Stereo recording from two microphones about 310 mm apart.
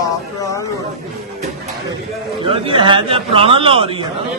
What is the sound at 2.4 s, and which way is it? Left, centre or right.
A man's voice, centre.